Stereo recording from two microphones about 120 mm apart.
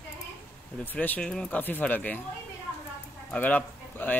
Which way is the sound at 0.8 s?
15° left (ahead or behind).